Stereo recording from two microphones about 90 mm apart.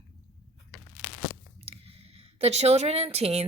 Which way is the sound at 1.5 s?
90° right.